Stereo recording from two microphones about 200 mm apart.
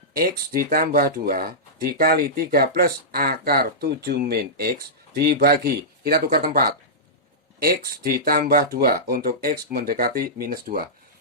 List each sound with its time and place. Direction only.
0.2 s speech: 50° right (ahead or behind)